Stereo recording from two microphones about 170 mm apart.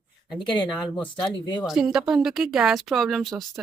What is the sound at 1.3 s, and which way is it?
Speech, 30° left (ahead or behind).